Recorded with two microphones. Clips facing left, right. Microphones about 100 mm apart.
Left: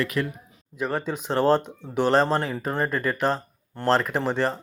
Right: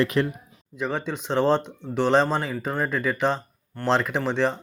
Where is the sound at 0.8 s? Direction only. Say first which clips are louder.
Left 1 dB; 5° left (ahead or behind).